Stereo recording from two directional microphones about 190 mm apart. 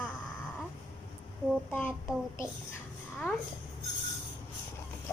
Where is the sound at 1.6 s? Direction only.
5° left (ahead or behind).